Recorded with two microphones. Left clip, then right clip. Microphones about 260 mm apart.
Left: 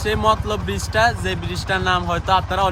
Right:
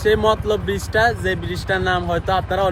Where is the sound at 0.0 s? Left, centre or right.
Centre.